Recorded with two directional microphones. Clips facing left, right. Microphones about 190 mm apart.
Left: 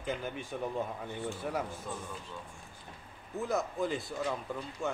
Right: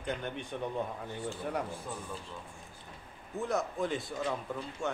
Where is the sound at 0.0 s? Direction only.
5° left (ahead or behind).